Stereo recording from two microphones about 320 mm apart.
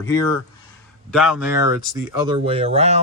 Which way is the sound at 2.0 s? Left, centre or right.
Centre.